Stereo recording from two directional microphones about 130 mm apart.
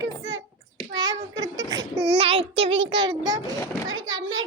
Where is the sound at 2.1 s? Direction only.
50° right (ahead or behind); by 3.5 s 35° right (ahead or behind).